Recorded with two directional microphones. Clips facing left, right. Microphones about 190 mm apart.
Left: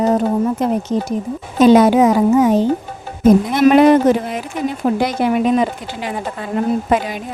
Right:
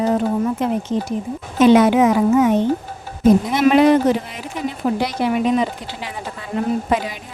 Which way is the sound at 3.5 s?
50° left (ahead or behind).